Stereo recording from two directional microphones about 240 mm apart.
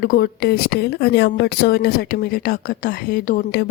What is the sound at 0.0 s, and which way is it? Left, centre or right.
A woman's voice, left.